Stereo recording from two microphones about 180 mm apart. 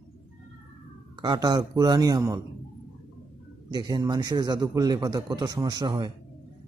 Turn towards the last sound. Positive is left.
turn(degrees=-25)  # may be behind; listen again after turning